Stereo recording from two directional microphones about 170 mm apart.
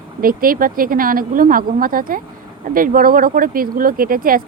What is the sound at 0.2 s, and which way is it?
Speech, 55° right (ahead or behind).